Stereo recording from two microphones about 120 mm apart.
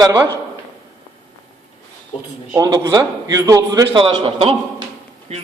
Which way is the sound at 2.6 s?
35° right (ahead or behind).